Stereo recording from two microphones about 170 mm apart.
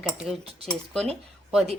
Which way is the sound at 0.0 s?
Centre (ahead or behind).